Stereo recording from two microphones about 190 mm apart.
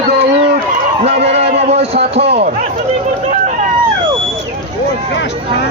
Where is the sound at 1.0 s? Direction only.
35° right (ahead or behind).